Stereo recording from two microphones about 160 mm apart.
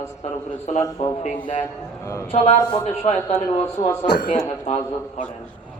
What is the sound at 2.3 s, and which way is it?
Music, 45° left (ahead or behind).